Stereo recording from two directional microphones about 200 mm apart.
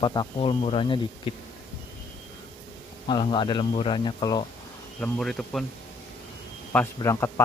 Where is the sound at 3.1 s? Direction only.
25° left (ahead or behind).